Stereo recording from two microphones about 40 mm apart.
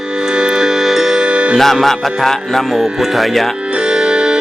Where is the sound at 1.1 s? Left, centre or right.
Right.